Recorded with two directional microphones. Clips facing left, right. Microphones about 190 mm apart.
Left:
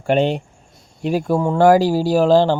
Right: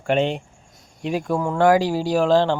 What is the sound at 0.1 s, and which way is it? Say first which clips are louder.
Speech: left 3 dB; 35° left (ahead or behind).